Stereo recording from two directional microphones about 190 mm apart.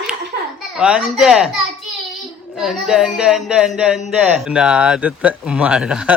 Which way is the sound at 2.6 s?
Centre (ahead or behind).